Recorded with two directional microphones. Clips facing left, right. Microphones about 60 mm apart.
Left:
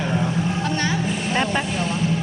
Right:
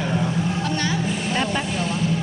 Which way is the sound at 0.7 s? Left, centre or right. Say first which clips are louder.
Left 1 dB; left.